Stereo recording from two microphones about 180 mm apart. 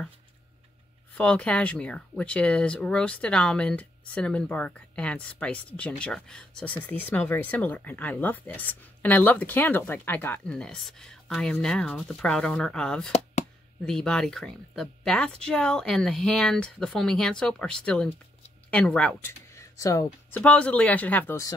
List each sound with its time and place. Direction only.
1.1 s speech: 5° left (ahead or behind)
13.1 s chop: 40° left (ahead or behind)
13.8 s speech: 5° left (ahead or behind)